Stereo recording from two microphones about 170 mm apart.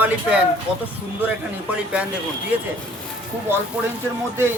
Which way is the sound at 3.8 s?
5° right (ahead or behind).